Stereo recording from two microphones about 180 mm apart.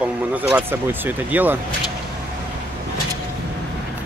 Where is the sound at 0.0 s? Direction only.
10° right (ahead or behind).